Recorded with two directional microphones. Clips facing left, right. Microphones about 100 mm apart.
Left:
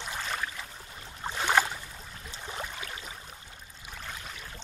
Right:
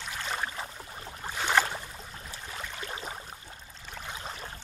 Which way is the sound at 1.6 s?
10° left (ahead or behind).